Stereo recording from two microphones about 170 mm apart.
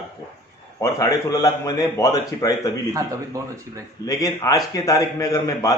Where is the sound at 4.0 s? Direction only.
20° left (ahead or behind).